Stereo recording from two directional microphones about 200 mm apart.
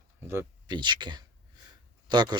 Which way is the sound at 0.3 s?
10° right (ahead or behind).